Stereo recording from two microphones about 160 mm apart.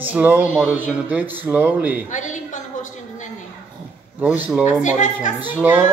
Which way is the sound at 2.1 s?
50° left (ahead or behind).